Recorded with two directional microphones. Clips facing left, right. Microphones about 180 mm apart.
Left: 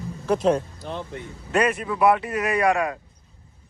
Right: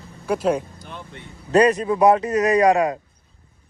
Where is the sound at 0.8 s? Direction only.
35° left (ahead or behind).